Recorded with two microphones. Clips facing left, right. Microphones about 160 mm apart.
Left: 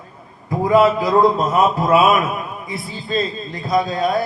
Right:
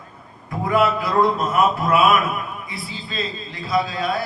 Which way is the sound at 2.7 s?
45° left (ahead or behind).